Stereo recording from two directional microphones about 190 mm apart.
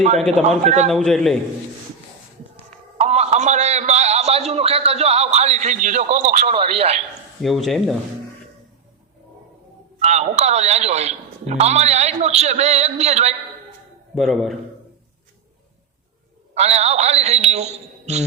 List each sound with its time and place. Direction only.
0.4 s a man's voice: 35° right (ahead or behind)
0.9 s speech: centre (ahead or behind)
2.6 s a sound: 35° right (ahead or behind)
6.6 s a man's voice: 30° right (ahead or behind)
7.4 s speech: centre (ahead or behind)
10.0 s a man's voice: 35° right (ahead or behind)
14.2 s speech: centre (ahead or behind)
16.6 s a man's voice: 35° right (ahead or behind)